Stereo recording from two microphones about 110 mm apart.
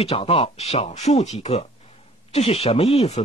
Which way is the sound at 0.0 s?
60° left (ahead or behind).